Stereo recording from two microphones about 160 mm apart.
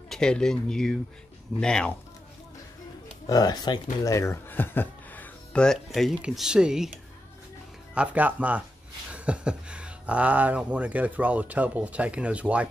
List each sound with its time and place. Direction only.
0.1 s speech: 5° left (ahead or behind)
3.3 s speech: 25° left (ahead or behind); by 6.9 s 5° right (ahead or behind)
7.9 s speech: 5° right (ahead or behind)